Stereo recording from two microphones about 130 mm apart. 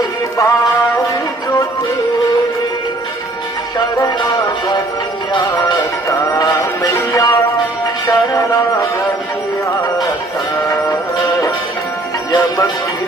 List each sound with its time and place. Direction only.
0.3 s music: 25° left (ahead or behind)
3.8 s music: 30° left (ahead or behind)
6.1 s music: 25° left (ahead or behind)
12.3 s music: 30° left (ahead or behind)